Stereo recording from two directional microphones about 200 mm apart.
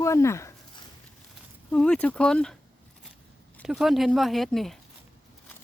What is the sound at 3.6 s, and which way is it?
Speech, centre (ahead or behind).